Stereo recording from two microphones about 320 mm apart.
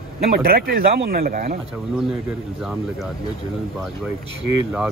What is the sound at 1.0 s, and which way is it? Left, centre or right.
Speech, right.